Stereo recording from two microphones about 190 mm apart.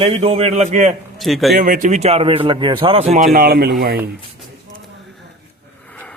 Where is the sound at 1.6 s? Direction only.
45° right (ahead or behind).